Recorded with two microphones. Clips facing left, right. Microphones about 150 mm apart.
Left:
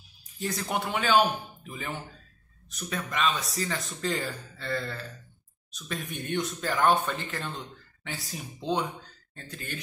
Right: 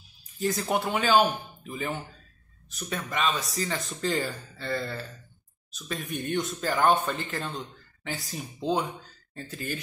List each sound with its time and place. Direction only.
0.4 s speech: centre (ahead or behind)